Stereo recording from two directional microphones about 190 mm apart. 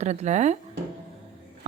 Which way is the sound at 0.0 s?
35° right (ahead or behind).